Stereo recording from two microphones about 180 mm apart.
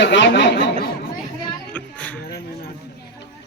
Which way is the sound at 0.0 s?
80° left.